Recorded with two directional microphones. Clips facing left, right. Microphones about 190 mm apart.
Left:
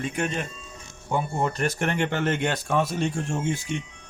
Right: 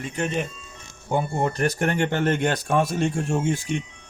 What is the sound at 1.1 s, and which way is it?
Speech, 35° right (ahead or behind).